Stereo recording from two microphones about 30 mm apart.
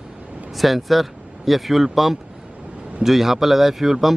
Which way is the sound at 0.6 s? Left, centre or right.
Centre.